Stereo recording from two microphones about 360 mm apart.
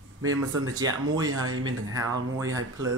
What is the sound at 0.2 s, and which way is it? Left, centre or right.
Speech, right.